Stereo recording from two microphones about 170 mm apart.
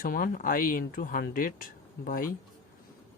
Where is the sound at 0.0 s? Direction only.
55° left (ahead or behind).